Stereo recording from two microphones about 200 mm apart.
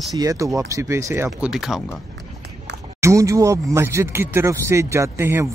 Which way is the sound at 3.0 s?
15° right (ahead or behind).